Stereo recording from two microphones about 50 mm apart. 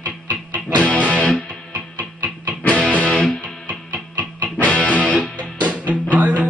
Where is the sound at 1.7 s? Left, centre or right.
Right.